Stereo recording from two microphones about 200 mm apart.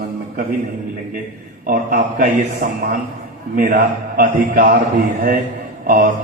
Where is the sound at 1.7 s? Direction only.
45° right (ahead or behind).